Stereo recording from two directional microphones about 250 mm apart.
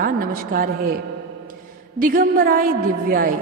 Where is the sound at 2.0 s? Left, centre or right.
Right.